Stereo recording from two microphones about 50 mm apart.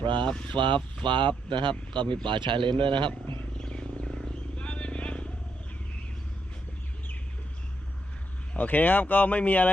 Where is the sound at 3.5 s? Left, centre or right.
Centre.